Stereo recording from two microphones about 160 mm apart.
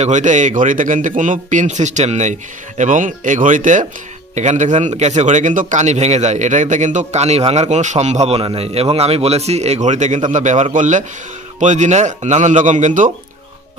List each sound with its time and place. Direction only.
0.0 s a man's voice: 50° right (ahead or behind)